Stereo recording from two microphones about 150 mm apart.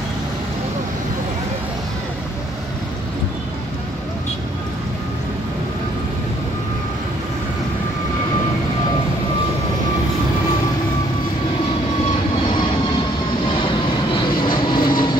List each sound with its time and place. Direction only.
14.4 s vehicle: 30° left (ahead or behind)